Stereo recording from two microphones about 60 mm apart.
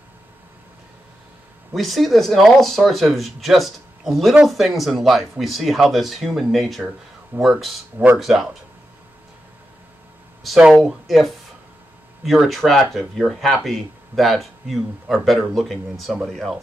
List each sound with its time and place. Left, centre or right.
1.7 s speech: centre
7.3 s speech: right
8.2 s speech: centre
10.4 s speech: centre